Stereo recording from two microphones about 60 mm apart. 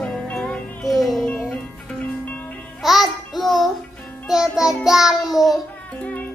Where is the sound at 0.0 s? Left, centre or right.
Centre.